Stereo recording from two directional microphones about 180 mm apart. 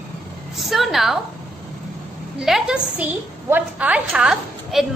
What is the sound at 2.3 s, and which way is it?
A woman's voice, centre (ahead or behind).